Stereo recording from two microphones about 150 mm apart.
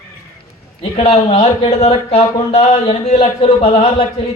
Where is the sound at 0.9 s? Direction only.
45° left (ahead or behind).